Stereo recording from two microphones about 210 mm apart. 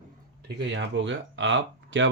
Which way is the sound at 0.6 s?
60° right (ahead or behind).